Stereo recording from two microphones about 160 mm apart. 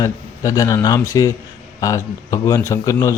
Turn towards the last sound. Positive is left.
turn(degrees=20)  # may be behind; listen again after turning